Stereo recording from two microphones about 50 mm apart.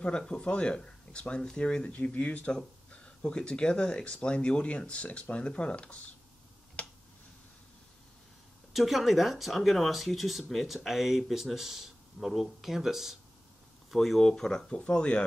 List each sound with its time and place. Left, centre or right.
0.3 s speech: centre
6.8 s a sound: left
8.7 s speech: centre